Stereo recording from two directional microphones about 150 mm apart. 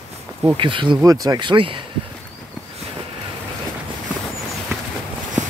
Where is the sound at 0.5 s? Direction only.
35° right (ahead or behind).